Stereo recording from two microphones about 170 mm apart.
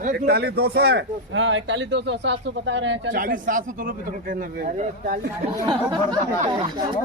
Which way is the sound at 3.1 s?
55° right (ahead or behind).